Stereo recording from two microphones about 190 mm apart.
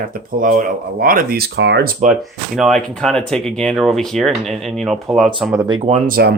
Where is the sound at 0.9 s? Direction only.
50° right (ahead or behind).